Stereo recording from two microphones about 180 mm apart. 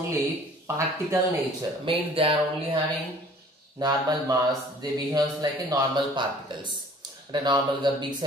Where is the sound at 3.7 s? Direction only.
20° right (ahead or behind).